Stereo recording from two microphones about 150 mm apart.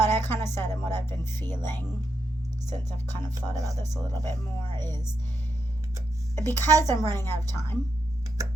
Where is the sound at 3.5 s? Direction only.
20° right (ahead or behind).